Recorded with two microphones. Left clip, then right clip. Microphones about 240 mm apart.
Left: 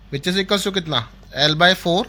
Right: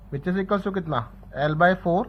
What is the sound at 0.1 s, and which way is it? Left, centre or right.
Speech, left.